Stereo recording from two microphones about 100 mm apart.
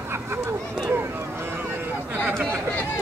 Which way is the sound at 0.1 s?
25° right (ahead or behind).